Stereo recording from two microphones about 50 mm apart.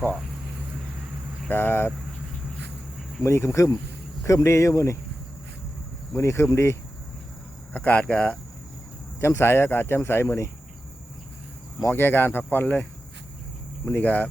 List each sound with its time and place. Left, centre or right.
1.5 s speech: left
3.2 s speech: left
4.3 s speech: left
6.1 s speech: left
7.7 s speech: left
9.2 s speech: left
11.9 s speech: left